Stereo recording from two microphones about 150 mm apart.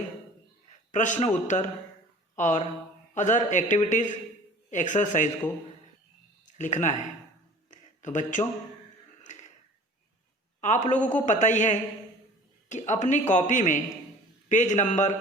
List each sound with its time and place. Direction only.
0.9 s a man's voice: 55° left (ahead or behind)
6.6 s a man's voice: 55° left (ahead or behind)
9.2 s a sound: 55° left (ahead or behind)
10.6 s a man's voice: 50° left (ahead or behind)